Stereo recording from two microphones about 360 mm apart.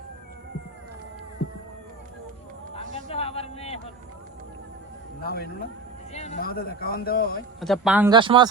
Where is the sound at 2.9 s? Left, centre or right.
Centre.